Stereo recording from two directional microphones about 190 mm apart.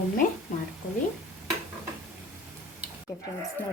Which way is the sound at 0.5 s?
45° left (ahead or behind).